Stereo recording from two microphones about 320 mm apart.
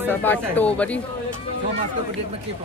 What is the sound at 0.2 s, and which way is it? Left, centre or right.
Speech, centre.